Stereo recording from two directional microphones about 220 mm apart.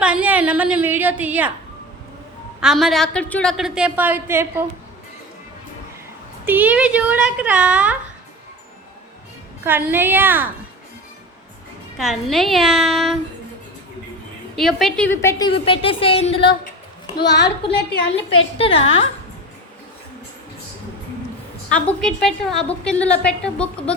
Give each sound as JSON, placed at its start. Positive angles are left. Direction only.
{"t": 0.0, "sound": "a woman's voice", "side_deg": -5}
{"t": 2.6, "sound": "a woman's voice", "side_deg": 0}
{"t": 6.4, "sound": "a woman's voice", "side_deg": -10}
{"t": 9.6, "sound": "a woman's voice", "side_deg": -10}
{"t": 11.9, "sound": "a woman's voice", "side_deg": 0}
{"t": 14.5, "sound": "a woman's voice", "side_deg": 0}
{"t": 15.4, "sound": "a woman's voice", "side_deg": 25}
{"t": 18.5, "sound": "a woman's voice", "side_deg": 25}
{"t": 21.7, "sound": "a woman's voice", "side_deg": 5}